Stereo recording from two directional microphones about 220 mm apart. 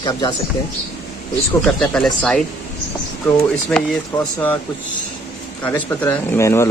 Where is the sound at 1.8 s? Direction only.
5° left (ahead or behind).